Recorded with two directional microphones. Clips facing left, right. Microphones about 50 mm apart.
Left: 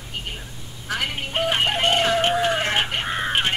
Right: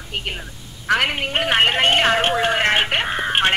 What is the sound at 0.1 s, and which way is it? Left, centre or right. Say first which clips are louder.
Telephone: right 5 dB; right.